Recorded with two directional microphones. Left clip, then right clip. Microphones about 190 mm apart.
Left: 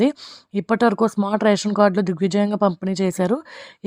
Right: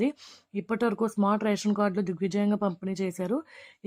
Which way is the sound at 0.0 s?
45° left (ahead or behind).